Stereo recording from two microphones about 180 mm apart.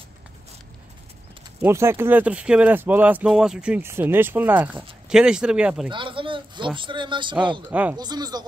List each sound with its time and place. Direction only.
1.6 s speech: 15° right (ahead or behind)
5.9 s speech: 25° right (ahead or behind)
7.7 s speech: 10° right (ahead or behind)
8.0 s speech: 20° right (ahead or behind)